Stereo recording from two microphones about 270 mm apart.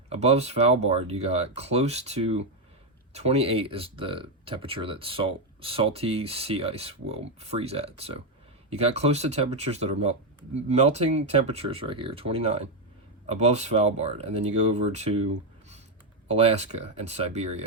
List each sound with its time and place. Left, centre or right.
0.1 s speech: right
16.3 s speech: right